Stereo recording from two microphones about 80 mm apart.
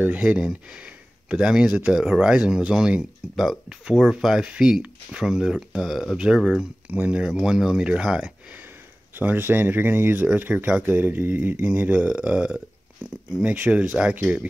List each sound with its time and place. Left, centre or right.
0.0 s speech: centre
6.9 s speech: centre
9.1 s speech: right